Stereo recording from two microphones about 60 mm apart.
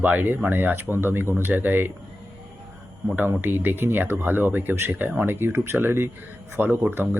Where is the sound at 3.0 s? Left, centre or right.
Right.